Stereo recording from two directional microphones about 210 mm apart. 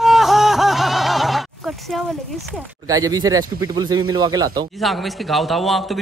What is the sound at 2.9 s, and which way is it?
A man's voice, 15° right (ahead or behind).